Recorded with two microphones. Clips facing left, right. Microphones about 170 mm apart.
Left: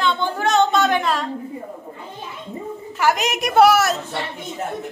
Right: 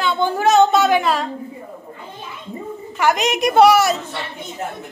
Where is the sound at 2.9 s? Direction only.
5° left (ahead or behind).